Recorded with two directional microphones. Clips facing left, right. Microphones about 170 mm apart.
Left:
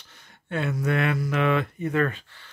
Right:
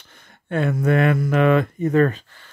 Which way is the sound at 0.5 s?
50° right (ahead or behind).